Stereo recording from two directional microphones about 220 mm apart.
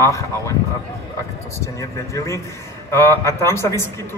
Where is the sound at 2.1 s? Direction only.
15° left (ahead or behind).